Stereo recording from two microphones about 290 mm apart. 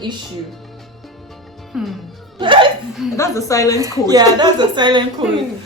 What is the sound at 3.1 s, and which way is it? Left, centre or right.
Speech, centre.